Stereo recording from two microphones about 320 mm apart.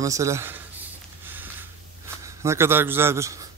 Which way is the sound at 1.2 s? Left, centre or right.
Centre.